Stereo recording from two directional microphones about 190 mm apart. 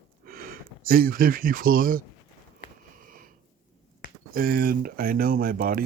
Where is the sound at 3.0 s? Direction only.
45° right (ahead or behind).